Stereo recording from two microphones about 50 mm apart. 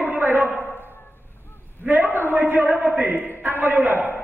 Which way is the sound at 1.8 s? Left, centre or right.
Right.